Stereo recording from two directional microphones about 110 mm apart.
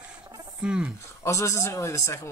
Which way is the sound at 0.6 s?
10° right (ahead or behind).